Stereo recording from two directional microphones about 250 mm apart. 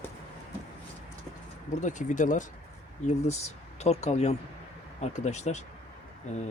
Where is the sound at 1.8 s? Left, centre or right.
Left.